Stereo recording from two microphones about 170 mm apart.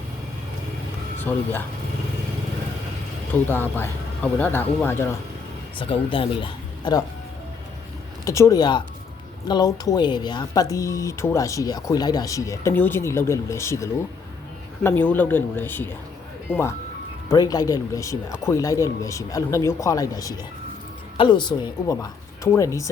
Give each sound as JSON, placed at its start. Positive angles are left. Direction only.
{"t": 3.3, "sound": "speech", "side_deg": 10}
{"t": 5.7, "sound": "speech", "side_deg": 30}
{"t": 8.2, "sound": "speech", "side_deg": 20}